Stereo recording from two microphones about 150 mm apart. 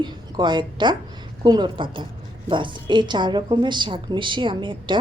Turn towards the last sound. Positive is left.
turn(degrees=-30)  # may be behind; listen again after turning